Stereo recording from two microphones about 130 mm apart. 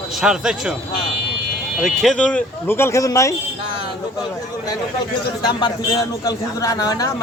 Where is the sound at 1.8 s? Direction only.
Centre (ahead or behind); by 3.3 s 25° left (ahead or behind).